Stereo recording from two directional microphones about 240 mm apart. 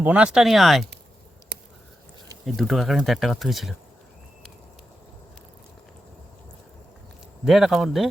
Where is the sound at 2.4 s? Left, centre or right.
Centre.